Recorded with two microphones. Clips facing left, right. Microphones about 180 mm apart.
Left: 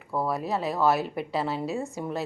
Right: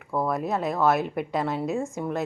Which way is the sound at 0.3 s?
35° left (ahead or behind).